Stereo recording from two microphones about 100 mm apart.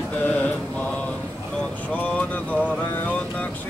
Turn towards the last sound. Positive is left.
turn(degrees=15)  # may be behind; listen again after turning